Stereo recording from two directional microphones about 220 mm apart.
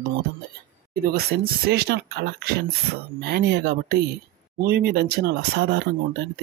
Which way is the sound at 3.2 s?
50° right (ahead or behind).